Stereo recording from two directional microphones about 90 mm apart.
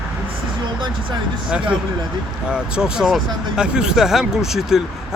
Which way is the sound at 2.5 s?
10° right (ahead or behind).